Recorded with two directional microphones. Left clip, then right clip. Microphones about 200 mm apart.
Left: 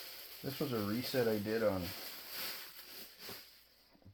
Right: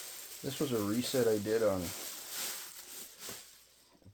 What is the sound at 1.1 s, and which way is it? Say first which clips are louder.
Speech: right 3 dB; 40° right (ahead or behind).